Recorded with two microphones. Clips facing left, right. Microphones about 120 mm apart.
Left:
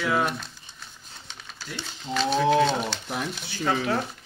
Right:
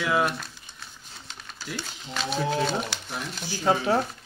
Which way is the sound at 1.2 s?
Centre (ahead or behind).